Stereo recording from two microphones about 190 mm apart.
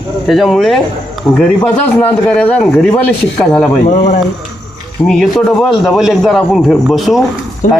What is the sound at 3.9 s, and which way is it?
Speech, 35° left (ahead or behind).